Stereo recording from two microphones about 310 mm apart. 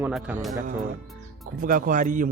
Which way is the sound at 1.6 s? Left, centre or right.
Right.